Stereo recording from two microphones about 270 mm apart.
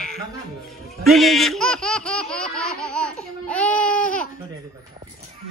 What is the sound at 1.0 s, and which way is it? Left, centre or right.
Laughter, centre.